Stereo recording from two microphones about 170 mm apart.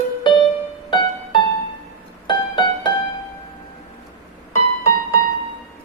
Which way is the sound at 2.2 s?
25° left (ahead or behind).